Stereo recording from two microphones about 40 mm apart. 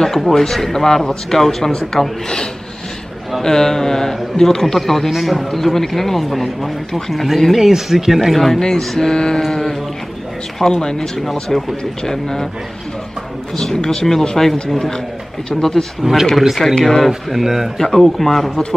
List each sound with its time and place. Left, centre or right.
0.3 s speech: centre
3.4 s a man's voice: centre
7.5 s speech: centre
9.4 s a man's voice: centre
10.6 s speech: centre
13.6 s speech: centre
16.0 s speech: centre
16.3 s a man's voice: centre
17.1 s speech: centre
17.7 s a man's voice: centre